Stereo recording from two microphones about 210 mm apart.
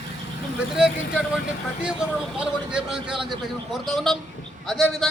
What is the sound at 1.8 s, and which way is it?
A man's voice, 5° right (ahead or behind).